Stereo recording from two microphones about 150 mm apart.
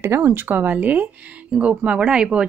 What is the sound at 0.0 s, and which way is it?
A woman's voice, 15° right (ahead or behind).